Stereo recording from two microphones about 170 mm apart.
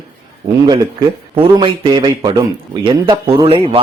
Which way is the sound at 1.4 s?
30° right (ahead or behind).